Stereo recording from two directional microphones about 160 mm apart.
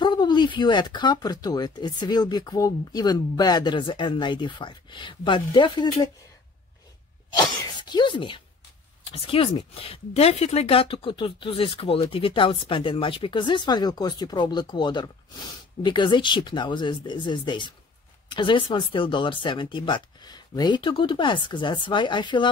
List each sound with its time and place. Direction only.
0.0 s speech: 25° left (ahead or behind)
7.3 s speech: 30° left (ahead or behind)